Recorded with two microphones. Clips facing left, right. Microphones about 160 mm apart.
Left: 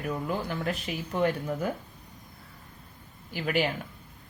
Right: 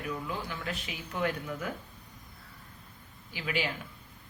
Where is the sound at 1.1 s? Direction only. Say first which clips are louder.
Left 5 dB; 35° left (ahead or behind).